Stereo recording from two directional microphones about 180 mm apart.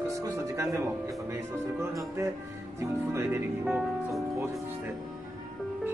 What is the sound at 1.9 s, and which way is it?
Speech, 15° right (ahead or behind).